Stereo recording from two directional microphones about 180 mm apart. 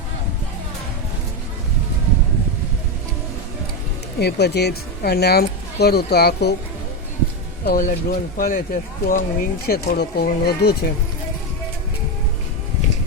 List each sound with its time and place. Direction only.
4.2 s speech: 65° left (ahead or behind)
7.6 s speech: 50° left (ahead or behind)